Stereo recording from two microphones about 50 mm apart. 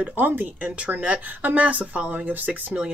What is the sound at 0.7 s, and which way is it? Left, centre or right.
Speech, right.